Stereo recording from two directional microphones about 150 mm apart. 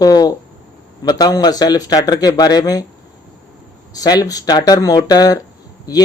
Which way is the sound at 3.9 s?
25° left (ahead or behind).